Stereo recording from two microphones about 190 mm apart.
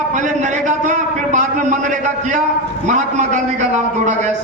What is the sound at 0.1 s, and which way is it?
A man's voice, 40° right (ahead or behind).